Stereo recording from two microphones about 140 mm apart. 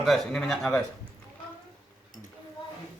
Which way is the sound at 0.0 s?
Centre (ahead or behind).